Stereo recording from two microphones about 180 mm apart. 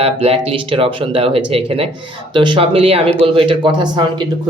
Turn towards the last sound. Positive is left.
turn(degrees=-25)  # may be behind; listen again after turning